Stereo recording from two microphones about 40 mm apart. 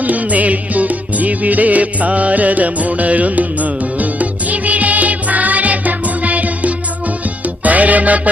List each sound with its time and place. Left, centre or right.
0.0 s music: right